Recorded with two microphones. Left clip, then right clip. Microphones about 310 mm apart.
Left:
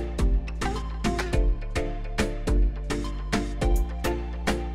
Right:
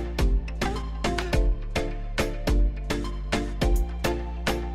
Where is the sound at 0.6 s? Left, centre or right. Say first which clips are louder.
Right 1 dB; centre.